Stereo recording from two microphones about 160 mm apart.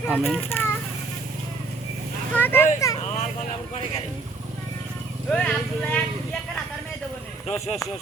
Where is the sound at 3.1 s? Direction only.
45° left (ahead or behind).